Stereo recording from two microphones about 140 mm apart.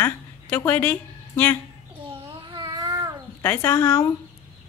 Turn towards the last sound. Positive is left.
turn(degrees=15)  # may be behind; listen again after turning